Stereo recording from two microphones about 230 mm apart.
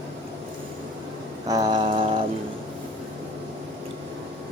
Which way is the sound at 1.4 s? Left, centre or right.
Centre.